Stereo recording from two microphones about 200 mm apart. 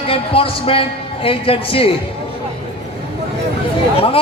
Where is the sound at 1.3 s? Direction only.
30° left (ahead or behind).